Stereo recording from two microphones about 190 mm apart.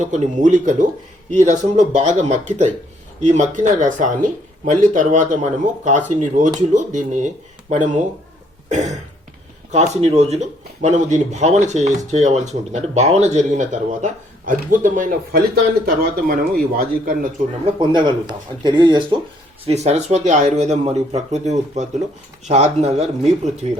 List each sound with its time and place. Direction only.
0.0 s speech: 40° right (ahead or behind)
17.7 s speech: 25° right (ahead or behind)
19.6 s speech: 35° right (ahead or behind)